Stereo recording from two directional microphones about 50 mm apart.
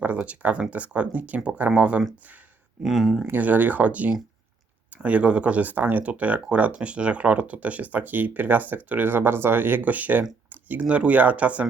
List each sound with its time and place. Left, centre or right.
0.0 s speech: right
2.8 s speech: centre
3.3 s speech: right